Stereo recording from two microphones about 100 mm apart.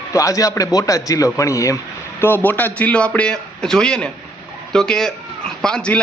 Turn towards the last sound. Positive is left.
turn(degrees=10)  # may be behind; listen again after turning